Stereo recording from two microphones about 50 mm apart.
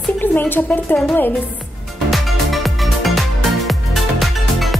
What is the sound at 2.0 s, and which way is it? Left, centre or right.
Music, centre.